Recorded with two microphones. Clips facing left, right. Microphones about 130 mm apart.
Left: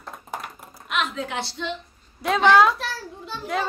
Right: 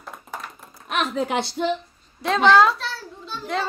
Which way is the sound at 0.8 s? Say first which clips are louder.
Right 2 dB; 35° right (ahead or behind).